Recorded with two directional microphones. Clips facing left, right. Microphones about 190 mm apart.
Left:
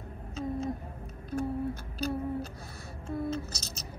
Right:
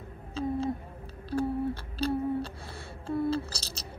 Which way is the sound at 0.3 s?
30° right (ahead or behind).